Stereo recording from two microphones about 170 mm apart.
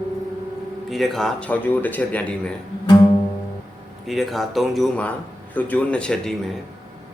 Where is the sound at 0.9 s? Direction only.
Centre (ahead or behind).